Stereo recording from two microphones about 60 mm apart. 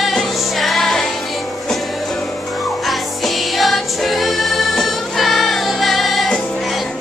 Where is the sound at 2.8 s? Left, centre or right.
Centre.